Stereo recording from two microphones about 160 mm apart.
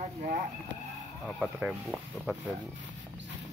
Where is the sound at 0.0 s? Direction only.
45° right (ahead or behind).